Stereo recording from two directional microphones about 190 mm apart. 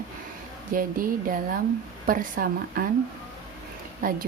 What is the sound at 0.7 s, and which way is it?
Speech, 45° right (ahead or behind).